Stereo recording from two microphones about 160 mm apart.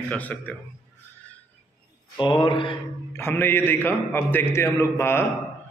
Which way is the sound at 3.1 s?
15° left (ahead or behind).